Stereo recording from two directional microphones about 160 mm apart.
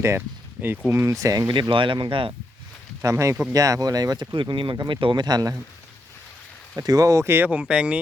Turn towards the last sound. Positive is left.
turn(degrees=-5)  # may be behind; listen again after turning